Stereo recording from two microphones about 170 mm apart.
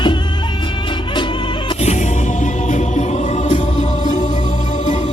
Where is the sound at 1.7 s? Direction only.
40° left (ahead or behind).